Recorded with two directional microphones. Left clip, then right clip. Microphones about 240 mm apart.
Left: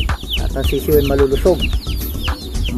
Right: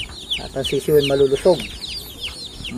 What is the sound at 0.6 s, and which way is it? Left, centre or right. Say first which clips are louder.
Speech: left 1 dB; left.